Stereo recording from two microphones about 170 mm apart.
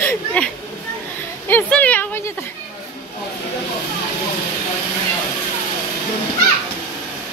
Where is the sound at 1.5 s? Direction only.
10° left (ahead or behind).